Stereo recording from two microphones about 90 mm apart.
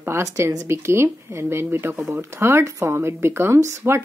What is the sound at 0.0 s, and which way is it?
A woman's voice, 35° right (ahead or behind).